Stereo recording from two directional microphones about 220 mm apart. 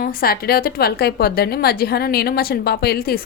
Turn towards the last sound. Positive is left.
turn(degrees=45)  # may be behind; listen again after turning